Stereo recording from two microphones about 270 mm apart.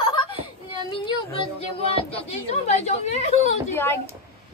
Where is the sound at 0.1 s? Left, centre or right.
Centre.